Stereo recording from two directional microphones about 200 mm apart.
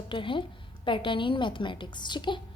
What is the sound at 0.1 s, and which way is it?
A woman's voice, 25° left (ahead or behind).